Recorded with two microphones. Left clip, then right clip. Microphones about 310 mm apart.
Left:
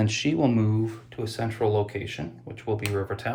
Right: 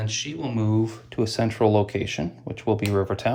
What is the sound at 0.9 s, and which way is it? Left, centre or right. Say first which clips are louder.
Speech: right 6 dB; right.